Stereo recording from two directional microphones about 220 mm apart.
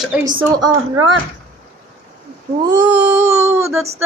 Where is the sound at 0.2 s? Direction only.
15° right (ahead or behind).